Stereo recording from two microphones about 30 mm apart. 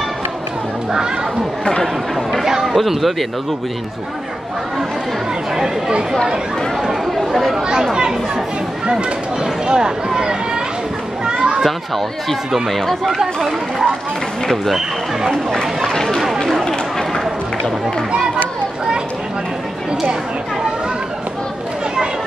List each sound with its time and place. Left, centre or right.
2.6 s a sound: centre
2.9 s speech: centre
5.6 s speech: right
6.8 s chatter: centre
8.9 s speech: right
11.2 s children playing: right
15.9 s a sound: centre
17.2 s run: centre